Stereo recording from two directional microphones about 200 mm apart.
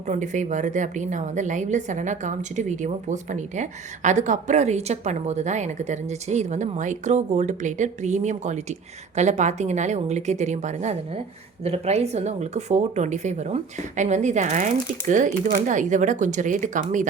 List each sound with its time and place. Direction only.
0.1 s a woman's voice: 40° right (ahead or behind)